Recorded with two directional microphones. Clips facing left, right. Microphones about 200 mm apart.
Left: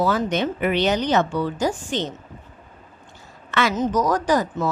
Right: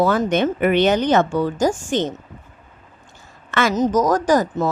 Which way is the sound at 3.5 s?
45° right (ahead or behind).